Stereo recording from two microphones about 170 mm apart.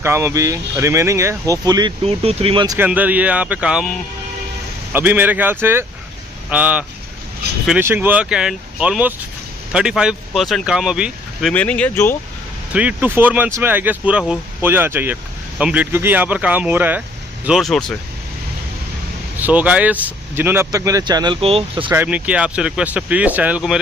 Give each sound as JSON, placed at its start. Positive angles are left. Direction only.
{"t": 0.0, "sound": "speech", "side_deg": -15}
{"t": 2.0, "sound": "speech", "side_deg": -35}
{"t": 2.6, "sound": "speech", "side_deg": -20}
{"t": 2.9, "sound": "speech", "side_deg": -10}
{"t": 4.9, "sound": "speech", "side_deg": -10}
{"t": 11.5, "sound": "speech", "side_deg": 10}
{"t": 12.7, "sound": "speech", "side_deg": -10}
{"t": 17.5, "sound": "speech", "side_deg": 0}
{"t": 19.4, "sound": "speech", "side_deg": -10}
{"t": 21.9, "sound": "speech", "side_deg": -10}